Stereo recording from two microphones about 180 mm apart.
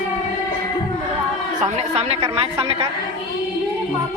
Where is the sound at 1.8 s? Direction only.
35° right (ahead or behind).